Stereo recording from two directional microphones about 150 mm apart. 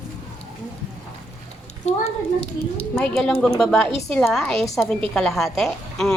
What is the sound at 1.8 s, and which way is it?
Speech, 45° left (ahead or behind).